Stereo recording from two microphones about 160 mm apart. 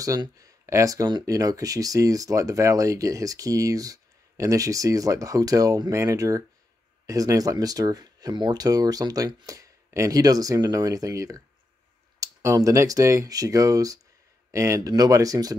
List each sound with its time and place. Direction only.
0.0 s speech: 20° right (ahead or behind)